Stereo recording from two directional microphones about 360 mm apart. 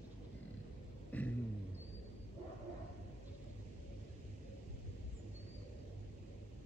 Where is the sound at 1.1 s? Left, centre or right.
Centre.